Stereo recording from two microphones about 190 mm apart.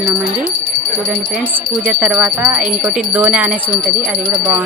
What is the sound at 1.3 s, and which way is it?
Speech, 5° right (ahead or behind).